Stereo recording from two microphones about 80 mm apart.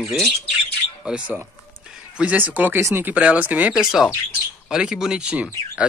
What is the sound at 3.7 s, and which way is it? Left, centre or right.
Speech, centre.